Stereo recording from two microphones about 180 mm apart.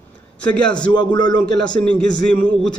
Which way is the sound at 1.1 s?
25° left (ahead or behind).